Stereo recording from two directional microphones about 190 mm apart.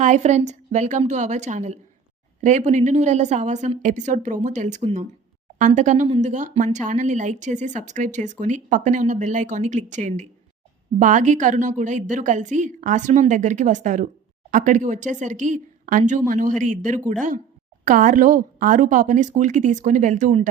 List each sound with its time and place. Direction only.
0.0 s speech: 40° right (ahead or behind)